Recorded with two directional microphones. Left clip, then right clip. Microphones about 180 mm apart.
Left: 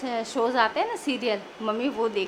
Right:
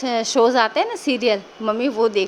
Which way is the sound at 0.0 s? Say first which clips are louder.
Right 9 dB; 35° right (ahead or behind).